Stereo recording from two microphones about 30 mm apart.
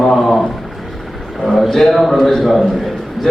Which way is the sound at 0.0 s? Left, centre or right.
Centre.